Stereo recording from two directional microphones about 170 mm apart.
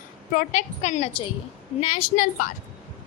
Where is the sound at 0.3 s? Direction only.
45° left (ahead or behind).